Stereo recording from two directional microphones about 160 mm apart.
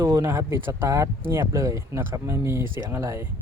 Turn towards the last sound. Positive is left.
turn(degrees=-15)  # may be behind; listen again after turning